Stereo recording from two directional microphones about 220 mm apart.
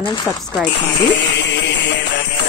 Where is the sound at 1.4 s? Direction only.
50° left (ahead or behind).